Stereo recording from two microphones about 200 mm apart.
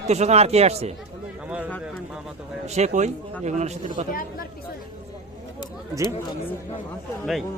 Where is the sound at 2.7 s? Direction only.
35° right (ahead or behind).